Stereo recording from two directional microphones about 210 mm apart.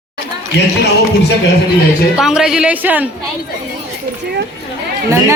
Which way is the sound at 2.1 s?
Centre (ahead or behind).